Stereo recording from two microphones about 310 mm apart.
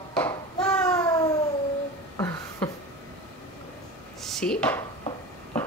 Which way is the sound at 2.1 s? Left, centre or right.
Centre.